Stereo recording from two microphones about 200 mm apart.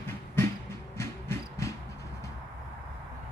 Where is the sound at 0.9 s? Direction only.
15° left (ahead or behind).